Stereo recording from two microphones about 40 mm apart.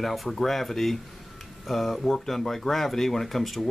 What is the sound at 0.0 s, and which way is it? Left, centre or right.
Speech, centre.